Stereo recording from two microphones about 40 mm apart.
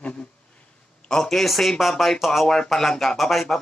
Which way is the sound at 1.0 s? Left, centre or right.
Centre.